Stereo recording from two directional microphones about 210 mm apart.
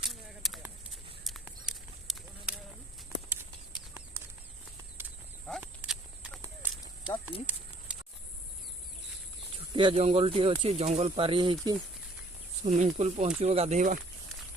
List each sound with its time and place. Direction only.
0.1 s a sound: centre (ahead or behind)
1.2 s clip-clop: centre (ahead or behind)
5.5 s horse: 5° right (ahead or behind)
9.7 s speech: 25° right (ahead or behind)
12.6 s speech: 35° right (ahead or behind)